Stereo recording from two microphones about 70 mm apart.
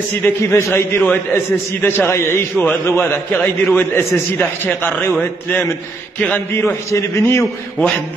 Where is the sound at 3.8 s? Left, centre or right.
Left.